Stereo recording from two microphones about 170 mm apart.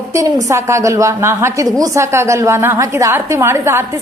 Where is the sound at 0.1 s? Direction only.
20° right (ahead or behind).